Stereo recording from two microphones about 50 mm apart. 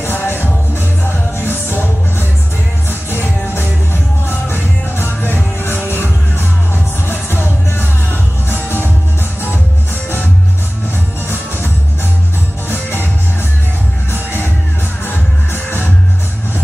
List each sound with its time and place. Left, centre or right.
0.0 s music: left
12.6 s music: left
15.0 s music: left